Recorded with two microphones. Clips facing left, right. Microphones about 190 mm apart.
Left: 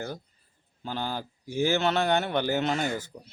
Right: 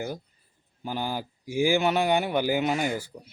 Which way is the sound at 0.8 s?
10° right (ahead or behind).